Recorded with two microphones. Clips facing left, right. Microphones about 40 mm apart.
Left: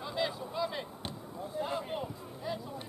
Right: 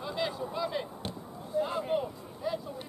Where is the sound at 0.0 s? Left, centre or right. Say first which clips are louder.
Right 1 dB; centre.